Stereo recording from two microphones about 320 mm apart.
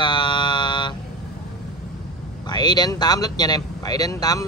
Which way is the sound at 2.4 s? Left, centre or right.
Centre.